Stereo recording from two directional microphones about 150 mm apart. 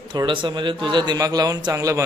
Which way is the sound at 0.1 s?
30° right (ahead or behind).